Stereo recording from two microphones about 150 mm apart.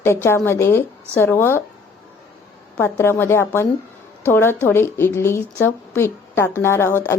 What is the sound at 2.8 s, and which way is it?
A woman's voice, 15° left (ahead or behind).